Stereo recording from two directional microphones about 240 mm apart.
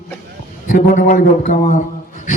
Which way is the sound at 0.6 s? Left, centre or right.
Left.